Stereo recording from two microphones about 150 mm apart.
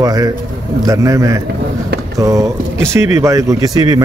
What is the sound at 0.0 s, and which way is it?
Speech, 25° right (ahead or behind).